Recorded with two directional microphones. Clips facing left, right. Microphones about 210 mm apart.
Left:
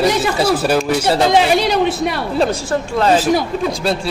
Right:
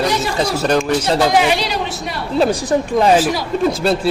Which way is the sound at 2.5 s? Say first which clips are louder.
Right 3 dB; 15° right (ahead or behind).